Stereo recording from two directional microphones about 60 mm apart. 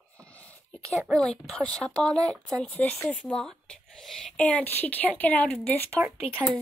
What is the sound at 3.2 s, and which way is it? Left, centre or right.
Speech, centre.